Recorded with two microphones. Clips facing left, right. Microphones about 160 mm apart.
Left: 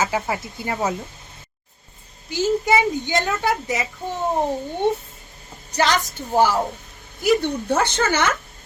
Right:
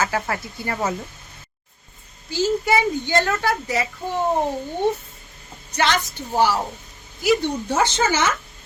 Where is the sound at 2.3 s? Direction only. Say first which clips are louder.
Left 1 dB; 20° left (ahead or behind).